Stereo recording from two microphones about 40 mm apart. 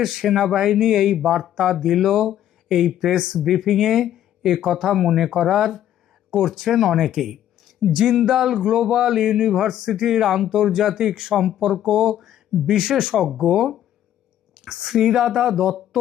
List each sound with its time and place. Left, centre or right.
0.0 s speech: centre
14.5 s a sound: centre
14.8 s speech: centre